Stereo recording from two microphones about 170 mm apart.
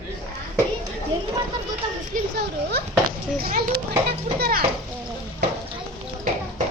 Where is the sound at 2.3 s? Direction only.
70° right (ahead or behind).